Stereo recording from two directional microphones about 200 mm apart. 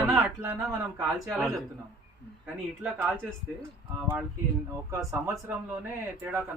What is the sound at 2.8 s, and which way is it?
Speech, 5° right (ahead or behind).